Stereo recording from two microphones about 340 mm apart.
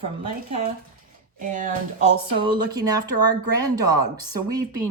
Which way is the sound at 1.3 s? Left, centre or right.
Right.